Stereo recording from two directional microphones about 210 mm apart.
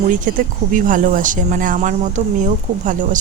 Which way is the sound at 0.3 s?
35° right (ahead or behind).